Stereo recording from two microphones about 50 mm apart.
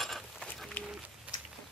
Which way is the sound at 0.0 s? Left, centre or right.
Centre.